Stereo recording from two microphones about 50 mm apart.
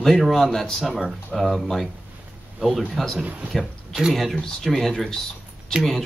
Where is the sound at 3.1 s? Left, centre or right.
Right.